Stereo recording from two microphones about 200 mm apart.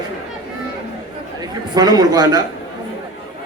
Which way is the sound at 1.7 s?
20° right (ahead or behind).